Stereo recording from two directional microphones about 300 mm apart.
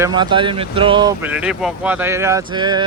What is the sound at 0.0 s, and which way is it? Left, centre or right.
Speech, centre.